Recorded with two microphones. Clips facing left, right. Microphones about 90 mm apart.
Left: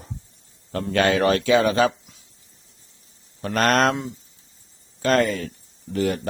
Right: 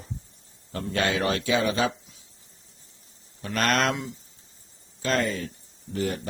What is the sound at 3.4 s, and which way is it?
Speech, 45° left (ahead or behind).